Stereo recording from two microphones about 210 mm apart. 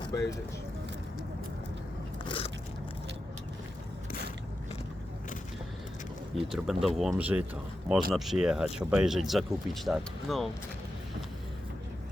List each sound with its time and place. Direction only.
0.0 s speech: 15° left (ahead or behind)
2.2 s biting: 25° left (ahead or behind)
6.3 s speech: centre (ahead or behind)